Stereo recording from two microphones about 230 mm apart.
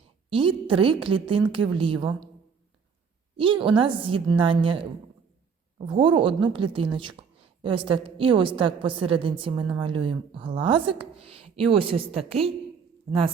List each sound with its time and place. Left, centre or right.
0.3 s a woman's voice: right
3.3 s a woman's voice: right
5.9 s a woman's voice: right